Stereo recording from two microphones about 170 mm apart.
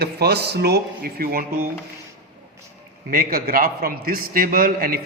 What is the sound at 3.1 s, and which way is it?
A man's voice, 55° right (ahead or behind).